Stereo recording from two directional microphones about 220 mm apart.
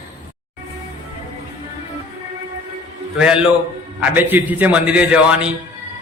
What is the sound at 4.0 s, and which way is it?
A man's voice, 10° right (ahead or behind).